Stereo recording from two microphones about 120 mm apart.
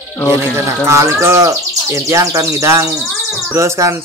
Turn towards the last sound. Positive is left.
turn(degrees=-25)  # may be behind; listen again after turning